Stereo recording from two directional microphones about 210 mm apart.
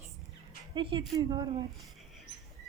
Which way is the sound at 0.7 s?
25° right (ahead or behind).